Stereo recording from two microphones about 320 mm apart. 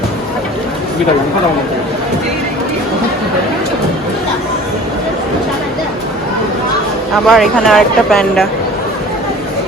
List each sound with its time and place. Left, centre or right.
7.3 s speech: centre